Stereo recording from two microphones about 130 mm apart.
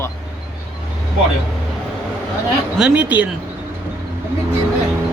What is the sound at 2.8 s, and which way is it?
Speech, 10° right (ahead or behind).